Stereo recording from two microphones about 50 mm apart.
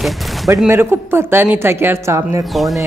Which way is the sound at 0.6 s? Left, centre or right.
Right.